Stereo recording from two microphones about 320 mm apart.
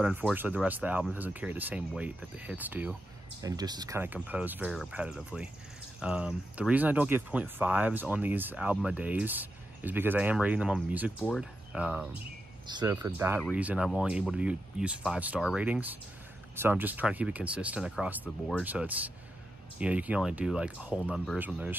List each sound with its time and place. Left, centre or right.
0.0 s speech: centre